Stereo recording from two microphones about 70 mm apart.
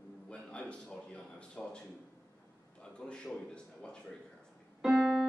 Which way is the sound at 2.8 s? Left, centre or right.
Centre.